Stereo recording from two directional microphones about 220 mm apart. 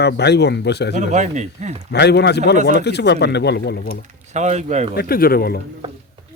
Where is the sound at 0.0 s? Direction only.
50° left (ahead or behind).